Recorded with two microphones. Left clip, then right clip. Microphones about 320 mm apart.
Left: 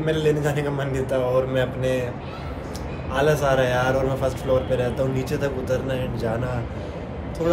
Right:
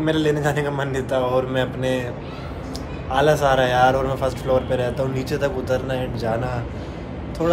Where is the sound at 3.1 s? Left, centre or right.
Centre.